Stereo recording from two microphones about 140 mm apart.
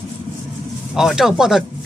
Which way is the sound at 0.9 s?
5° right (ahead or behind).